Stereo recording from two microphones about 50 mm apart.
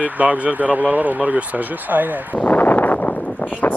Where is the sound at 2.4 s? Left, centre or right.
Left.